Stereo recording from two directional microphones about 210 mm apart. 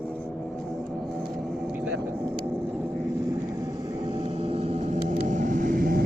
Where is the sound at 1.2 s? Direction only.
Centre (ahead or behind).